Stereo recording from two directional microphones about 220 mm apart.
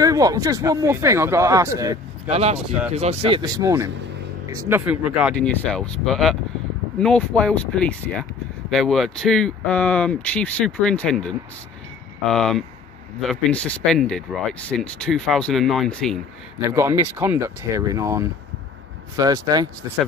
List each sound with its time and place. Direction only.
0.0 s speech: 15° right (ahead or behind)
2.2 s speech: 30° right (ahead or behind); by 16.2 s centre (ahead or behind)
16.7 s speech: 15° right (ahead or behind)